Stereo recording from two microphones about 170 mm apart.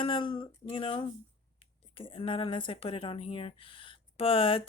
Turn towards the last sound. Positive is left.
turn(degrees=30)  # may be behind; listen again after turning